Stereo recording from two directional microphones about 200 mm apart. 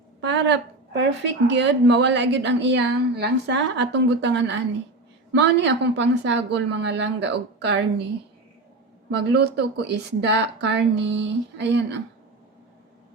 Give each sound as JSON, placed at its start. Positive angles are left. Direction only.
{"t": 0.2, "sound": "a woman's voice", "side_deg": -60}
{"t": 9.0, "sound": "a woman's voice", "side_deg": -55}